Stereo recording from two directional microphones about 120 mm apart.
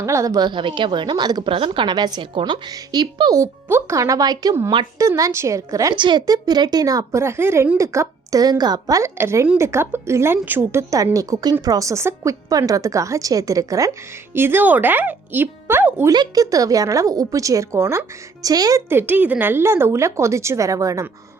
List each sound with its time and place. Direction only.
0.0 s a woman's voice: 25° right (ahead or behind)
6.0 s a woman's voice: 40° right (ahead or behind)
14.3 s speech: 20° right (ahead or behind)
16.0 s a woman's voice: 35° right (ahead or behind)
18.9 s a woman's voice: 15° right (ahead or behind)